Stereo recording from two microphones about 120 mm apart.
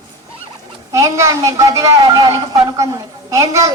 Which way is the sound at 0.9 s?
25° right (ahead or behind).